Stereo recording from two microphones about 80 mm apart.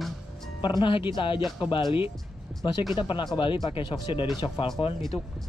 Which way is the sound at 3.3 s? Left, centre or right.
Left.